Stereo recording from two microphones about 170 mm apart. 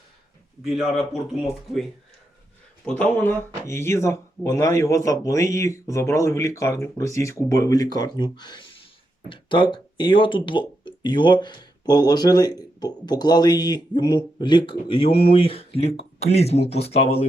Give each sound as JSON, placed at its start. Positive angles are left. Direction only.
{"t": 0.6, "sound": "a man's voice", "side_deg": 0}
{"t": 2.8, "sound": "speech", "side_deg": 5}